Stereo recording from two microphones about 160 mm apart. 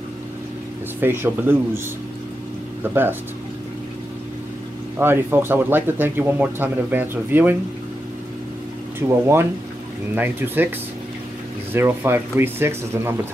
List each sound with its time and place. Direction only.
1.0 s speech: 15° right (ahead or behind)
2.8 s speech: 15° right (ahead or behind)
4.9 s speech: 15° right (ahead or behind)
9.2 s speech: 15° right (ahead or behind)
11.7 s speech: 15° right (ahead or behind)